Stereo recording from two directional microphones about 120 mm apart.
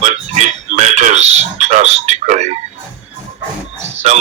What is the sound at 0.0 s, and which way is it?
Frog, 75° right (ahead or behind).